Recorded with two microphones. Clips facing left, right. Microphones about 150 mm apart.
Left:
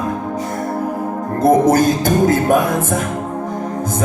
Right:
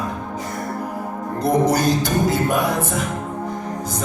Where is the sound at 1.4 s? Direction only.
50° left (ahead or behind).